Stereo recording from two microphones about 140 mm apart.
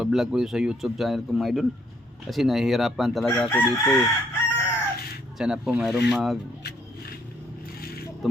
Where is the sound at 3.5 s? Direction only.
15° left (ahead or behind).